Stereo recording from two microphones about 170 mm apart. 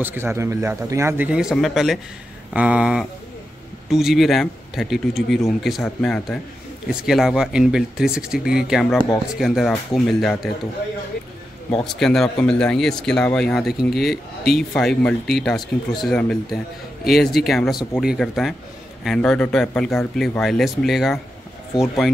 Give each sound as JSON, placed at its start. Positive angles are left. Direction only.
{"t": 0.0, "sound": "a man's voice", "side_deg": -15}
{"t": 11.8, "sound": "speech", "side_deg": 5}